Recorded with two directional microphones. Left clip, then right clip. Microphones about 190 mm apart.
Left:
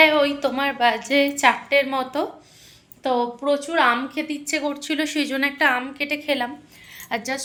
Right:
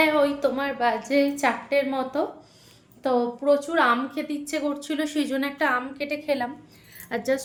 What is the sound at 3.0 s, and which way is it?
A woman's voice, 10° right (ahead or behind).